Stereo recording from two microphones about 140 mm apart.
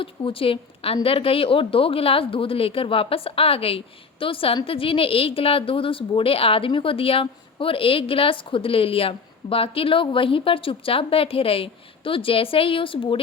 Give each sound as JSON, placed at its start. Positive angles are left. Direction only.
{"t": 0.0, "sound": "speech", "side_deg": 40}